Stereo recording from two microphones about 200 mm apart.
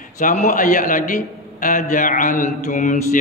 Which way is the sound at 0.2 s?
40° left (ahead or behind).